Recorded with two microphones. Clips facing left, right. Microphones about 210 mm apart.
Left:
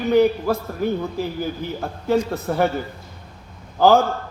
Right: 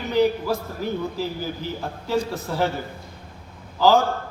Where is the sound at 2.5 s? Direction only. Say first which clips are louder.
Left 5 dB; 55° left (ahead or behind).